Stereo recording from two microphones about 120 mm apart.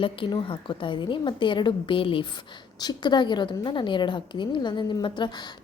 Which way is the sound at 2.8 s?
35° left (ahead or behind).